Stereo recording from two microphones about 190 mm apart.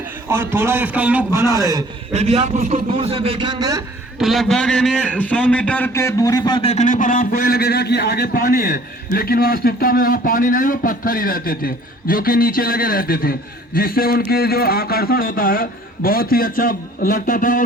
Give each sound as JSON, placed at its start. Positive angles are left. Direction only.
{"t": 0.3, "sound": "a man's voice", "side_deg": -15}
{"t": 2.1, "sound": "a man's voice", "side_deg": -35}
{"t": 4.2, "sound": "a man's voice", "side_deg": 0}